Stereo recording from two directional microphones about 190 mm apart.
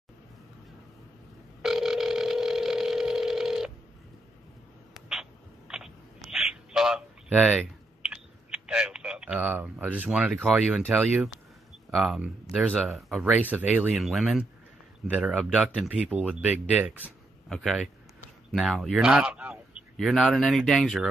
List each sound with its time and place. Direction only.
1.6 s telephone: centre (ahead or behind)
5.7 s a sound: 5° right (ahead or behind)
6.3 s typing: 5° right (ahead or behind)
11.9 s speech: 5° right (ahead or behind)
17.0 s a sound: centre (ahead or behind)
18.5 s speech: centre (ahead or behind)